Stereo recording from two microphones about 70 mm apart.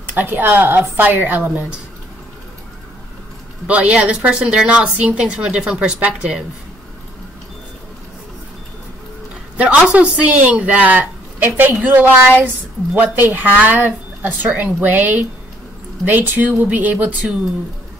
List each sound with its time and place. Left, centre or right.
0.0 s a woman's voice: right
3.6 s a woman's voice: centre
9.9 s a woman's voice: right